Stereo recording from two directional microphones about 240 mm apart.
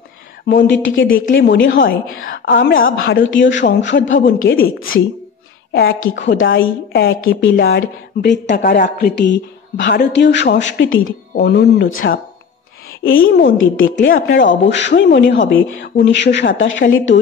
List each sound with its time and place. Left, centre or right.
0.5 s a woman's voice: left